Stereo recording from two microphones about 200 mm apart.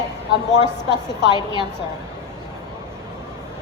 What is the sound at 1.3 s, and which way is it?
Speech, 25° left (ahead or behind).